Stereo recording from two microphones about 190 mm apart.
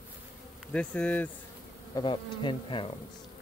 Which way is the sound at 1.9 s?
25° left (ahead or behind).